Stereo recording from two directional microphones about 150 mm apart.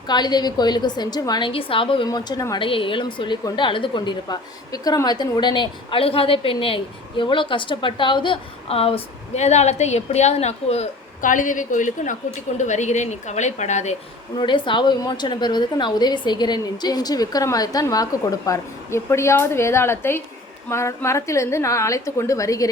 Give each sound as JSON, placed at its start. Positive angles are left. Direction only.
{"t": 0.1, "sound": "a woman's voice", "side_deg": 30}
{"t": 2.0, "sound": "a woman's voice", "side_deg": 25}
{"t": 14.3, "sound": "a woman's voice", "side_deg": 35}